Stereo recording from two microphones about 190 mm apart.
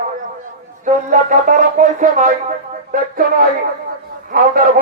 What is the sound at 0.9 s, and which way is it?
A man's voice, 40° right (ahead or behind).